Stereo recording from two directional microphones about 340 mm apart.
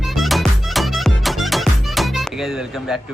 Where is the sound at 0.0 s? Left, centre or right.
Centre.